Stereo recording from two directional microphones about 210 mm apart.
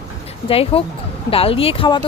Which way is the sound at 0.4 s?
25° left (ahead or behind).